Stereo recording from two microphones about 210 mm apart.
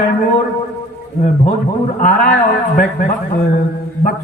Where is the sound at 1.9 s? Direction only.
45° left (ahead or behind).